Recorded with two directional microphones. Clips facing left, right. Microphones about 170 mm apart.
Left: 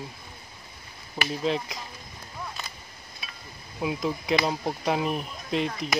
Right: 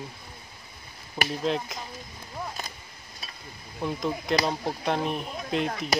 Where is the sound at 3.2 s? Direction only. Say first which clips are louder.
Even; 40° right (ahead or behind).